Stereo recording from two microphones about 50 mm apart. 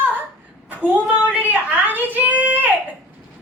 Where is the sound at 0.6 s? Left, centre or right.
Right.